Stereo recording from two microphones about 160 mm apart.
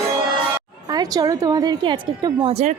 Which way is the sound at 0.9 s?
25° right (ahead or behind).